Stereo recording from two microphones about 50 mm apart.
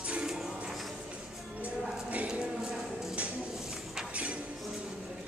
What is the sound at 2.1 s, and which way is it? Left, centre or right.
Clip-clop, right.